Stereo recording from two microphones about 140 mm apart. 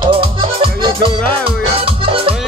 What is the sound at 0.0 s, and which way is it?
Music, 35° right (ahead or behind).